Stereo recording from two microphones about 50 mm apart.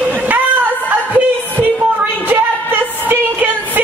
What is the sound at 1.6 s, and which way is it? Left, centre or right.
Music, right.